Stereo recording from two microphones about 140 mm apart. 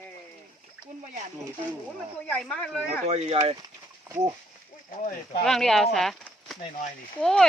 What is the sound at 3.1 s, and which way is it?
Speech, 50° right (ahead or behind).